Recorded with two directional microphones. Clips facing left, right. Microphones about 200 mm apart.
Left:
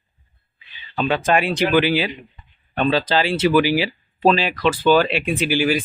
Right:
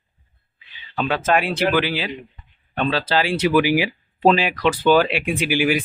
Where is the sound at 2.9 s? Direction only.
5° right (ahead or behind).